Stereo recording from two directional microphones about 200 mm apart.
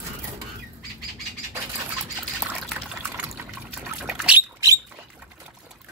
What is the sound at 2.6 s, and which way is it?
Water, centre (ahead or behind).